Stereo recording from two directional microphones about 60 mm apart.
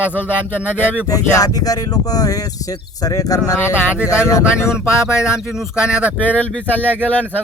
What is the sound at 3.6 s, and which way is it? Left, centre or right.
Speech, left.